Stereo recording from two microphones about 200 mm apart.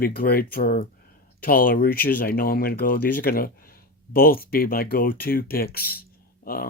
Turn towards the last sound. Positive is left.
turn(degrees=50)  # may be behind; listen again after turning